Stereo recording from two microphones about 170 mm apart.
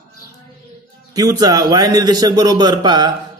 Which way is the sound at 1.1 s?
20° right (ahead or behind).